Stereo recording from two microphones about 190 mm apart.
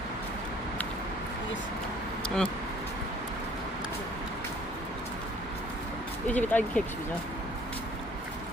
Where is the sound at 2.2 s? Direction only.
5° left (ahead or behind).